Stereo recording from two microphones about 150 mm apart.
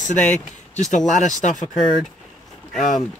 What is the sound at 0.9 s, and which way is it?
Speech, 55° left (ahead or behind).